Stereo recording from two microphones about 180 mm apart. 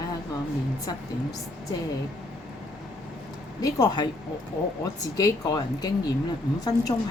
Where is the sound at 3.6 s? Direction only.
20° left (ahead or behind).